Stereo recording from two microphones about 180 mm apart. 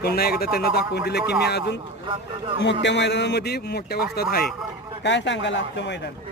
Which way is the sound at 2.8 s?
75° left (ahead or behind).